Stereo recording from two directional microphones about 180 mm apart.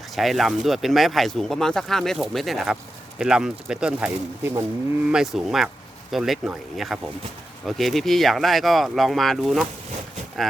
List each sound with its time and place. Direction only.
0.2 s speech: centre (ahead or behind)